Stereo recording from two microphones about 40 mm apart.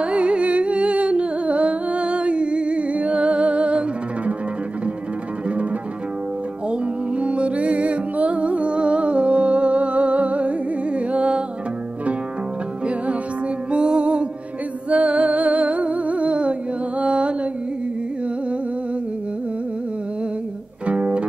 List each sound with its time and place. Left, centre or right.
0.0 s music: right
6.7 s music: right
12.8 s music: right
17.0 s mantra: right
20.8 s music: right